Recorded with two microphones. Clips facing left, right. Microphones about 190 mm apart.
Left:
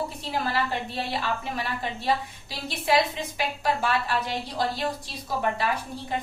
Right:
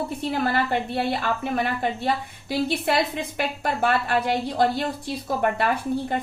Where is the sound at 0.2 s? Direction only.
55° right (ahead or behind).